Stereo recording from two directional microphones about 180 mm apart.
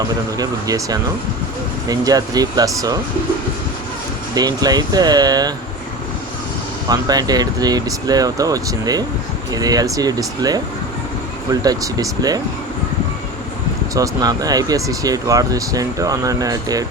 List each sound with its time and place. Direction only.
0.3 s speech: 20° right (ahead or behind)
4.4 s speech: 20° right (ahead or behind)
6.8 s speech: 20° right (ahead or behind)
11.6 s speech: 20° right (ahead or behind)
13.9 s speech: 20° right (ahead or behind)